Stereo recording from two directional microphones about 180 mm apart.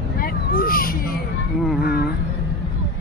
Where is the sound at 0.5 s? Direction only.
55° left (ahead or behind).